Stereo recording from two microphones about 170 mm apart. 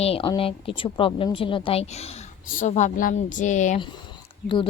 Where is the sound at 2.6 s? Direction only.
45° left (ahead or behind).